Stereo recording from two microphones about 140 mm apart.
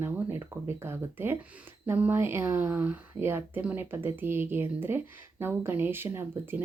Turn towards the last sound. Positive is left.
turn(degrees=-15)  # may be behind; listen again after turning